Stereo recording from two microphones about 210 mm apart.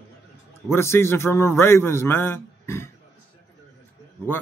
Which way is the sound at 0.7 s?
10° left (ahead or behind).